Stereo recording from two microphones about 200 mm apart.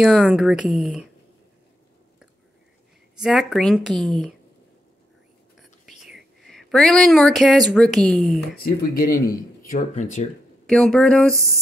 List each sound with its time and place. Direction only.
0.0 s speech: centre (ahead or behind)
3.2 s speech: centre (ahead or behind)
5.6 s speech: centre (ahead or behind)
8.6 s speech: 50° left (ahead or behind)
10.7 s speech: 5° left (ahead or behind)